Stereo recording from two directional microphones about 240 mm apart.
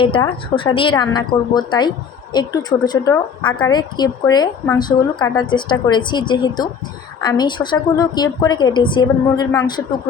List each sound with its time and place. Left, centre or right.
0.0 s a woman's voice: left